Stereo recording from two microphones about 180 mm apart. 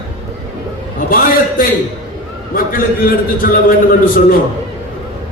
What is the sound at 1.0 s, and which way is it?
A man's voice, 50° left (ahead or behind).